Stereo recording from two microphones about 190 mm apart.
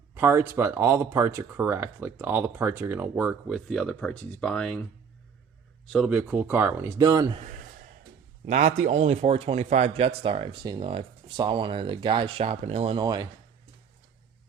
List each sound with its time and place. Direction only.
0.1 s speech: 10° right (ahead or behind); by 4.8 s 5° left (ahead or behind)
5.8 s speech: centre (ahead or behind); by 7.3 s 20° right (ahead or behind)
7.3 s a man's voice: 40° right (ahead or behind); by 13.2 s 20° right (ahead or behind)